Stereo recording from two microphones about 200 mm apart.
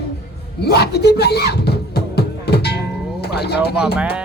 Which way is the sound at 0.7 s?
55° left (ahead or behind).